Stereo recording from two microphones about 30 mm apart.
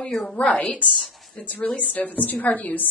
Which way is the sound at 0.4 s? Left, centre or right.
Left.